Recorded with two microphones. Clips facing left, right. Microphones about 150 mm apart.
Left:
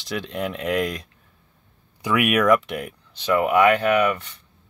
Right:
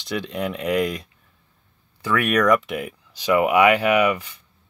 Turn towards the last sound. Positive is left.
turn(degrees=-10)  # may be behind; listen again after turning